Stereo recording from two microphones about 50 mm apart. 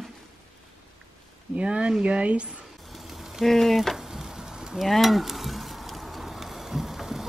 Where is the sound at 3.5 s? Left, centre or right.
Centre.